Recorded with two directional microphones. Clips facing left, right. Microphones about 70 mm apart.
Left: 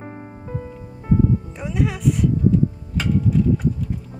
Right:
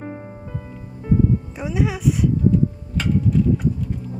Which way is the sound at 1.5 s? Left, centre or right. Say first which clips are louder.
Right 1 dB; centre.